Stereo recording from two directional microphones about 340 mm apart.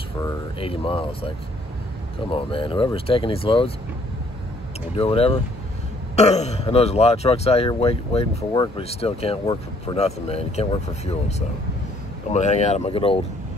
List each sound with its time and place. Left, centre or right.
0.2 s speech: centre
4.9 s speech: centre